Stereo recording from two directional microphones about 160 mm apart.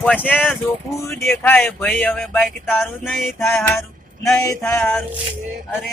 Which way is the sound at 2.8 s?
Centre (ahead or behind).